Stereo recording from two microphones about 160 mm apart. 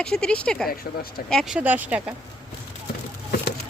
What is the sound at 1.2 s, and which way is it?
Speech, centre (ahead or behind).